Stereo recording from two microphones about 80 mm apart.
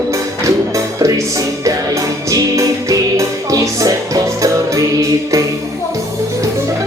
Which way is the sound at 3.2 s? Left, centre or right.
Right.